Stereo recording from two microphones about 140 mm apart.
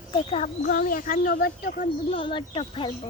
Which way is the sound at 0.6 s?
80° left.